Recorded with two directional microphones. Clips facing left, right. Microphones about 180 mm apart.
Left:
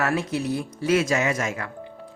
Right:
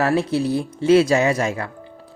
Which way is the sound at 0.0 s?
30° right (ahead or behind).